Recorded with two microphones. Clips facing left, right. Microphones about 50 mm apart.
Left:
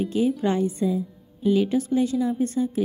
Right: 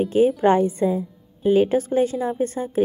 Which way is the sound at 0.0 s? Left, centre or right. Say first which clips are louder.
Right 6 dB; right.